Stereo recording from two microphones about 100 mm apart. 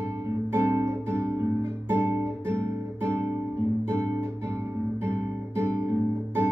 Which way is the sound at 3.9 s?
25° right (ahead or behind).